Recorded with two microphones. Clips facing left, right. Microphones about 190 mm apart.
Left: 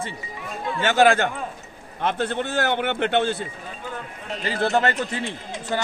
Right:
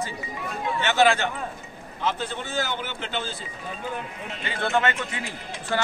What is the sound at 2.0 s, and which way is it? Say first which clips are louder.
A man's voice: left 5 dB; 60° left (ahead or behind).